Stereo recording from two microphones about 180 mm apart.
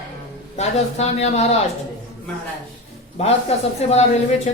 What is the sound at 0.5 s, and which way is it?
Speech, 35° left (ahead or behind).